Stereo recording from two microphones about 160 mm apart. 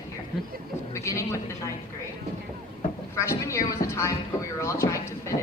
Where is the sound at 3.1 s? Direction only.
20° left (ahead or behind).